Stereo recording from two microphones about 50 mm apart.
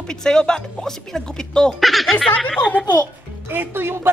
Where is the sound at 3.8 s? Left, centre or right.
Right.